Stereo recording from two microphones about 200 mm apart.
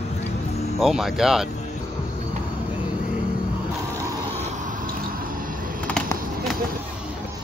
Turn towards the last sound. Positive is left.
turn(degrees=5)  # may be behind; listen again after turning